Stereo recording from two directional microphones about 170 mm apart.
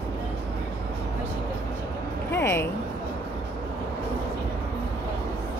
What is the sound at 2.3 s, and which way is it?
Speech, 15° left (ahead or behind).